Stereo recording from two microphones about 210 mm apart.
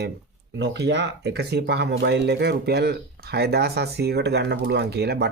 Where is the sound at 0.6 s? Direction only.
55° right (ahead or behind).